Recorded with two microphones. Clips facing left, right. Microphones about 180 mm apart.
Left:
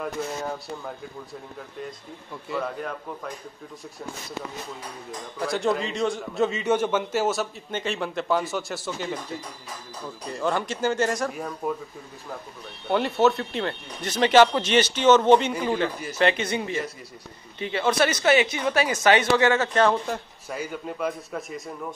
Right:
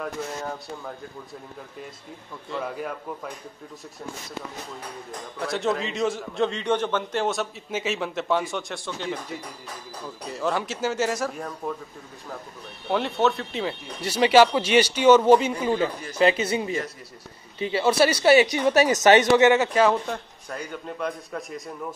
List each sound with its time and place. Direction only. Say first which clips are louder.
2.5 s speech: left 2 dB; 5° left (ahead or behind)
5.4 s a man's voice: left 1 dB; centre (ahead or behind)
12.8 s speech: left 2 dB; centre (ahead or behind)
17.6 s a man's voice: right 2 dB; 25° right (ahead or behind)
17.9 s speech: right 3 dB; 10° right (ahead or behind)
18.2 s a woman's voice: right 5 dB; 35° right (ahead or behind)
18.9 s speech: right 2 dB; 20° right (ahead or behind)
20.1 s a man's voice: left 1 dB; 5° left (ahead or behind)